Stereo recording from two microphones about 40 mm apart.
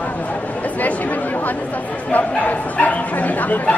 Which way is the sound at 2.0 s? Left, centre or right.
Left.